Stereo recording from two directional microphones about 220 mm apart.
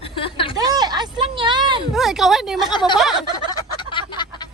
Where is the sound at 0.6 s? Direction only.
15° right (ahead or behind).